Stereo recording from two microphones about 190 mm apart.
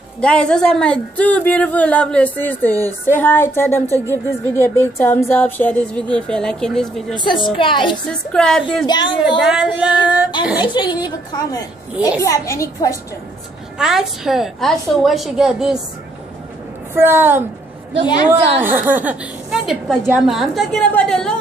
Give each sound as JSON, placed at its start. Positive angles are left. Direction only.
{"t": 0.2, "sound": "speech", "side_deg": 5}
{"t": 3.8, "sound": "a woman's voice", "side_deg": -15}
{"t": 4.1, "sound": "speech", "side_deg": 10}
{"t": 7.2, "sound": "a woman's voice", "side_deg": 25}
{"t": 8.1, "sound": "a woman's voice", "side_deg": 5}
{"t": 8.8, "sound": "a woman's voice", "side_deg": 25}
{"t": 9.4, "sound": "a woman's voice", "side_deg": -5}
{"t": 10.7, "sound": "speech", "side_deg": 25}
{"t": 13.7, "sound": "a woman's voice", "side_deg": 0}
{"t": 16.9, "sound": "a woman's voice", "side_deg": -10}
{"t": 18.6, "sound": "a woman's voice", "side_deg": -10}